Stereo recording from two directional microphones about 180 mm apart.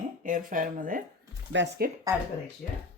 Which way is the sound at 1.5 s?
90° right.